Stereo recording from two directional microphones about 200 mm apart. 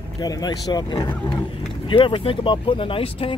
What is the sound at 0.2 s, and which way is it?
Speech, 20° left (ahead or behind).